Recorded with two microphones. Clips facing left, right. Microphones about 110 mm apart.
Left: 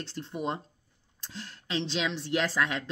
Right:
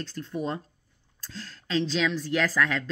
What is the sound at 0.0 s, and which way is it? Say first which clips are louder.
A woman's voice: right 2 dB; 25° left (ahead or behind).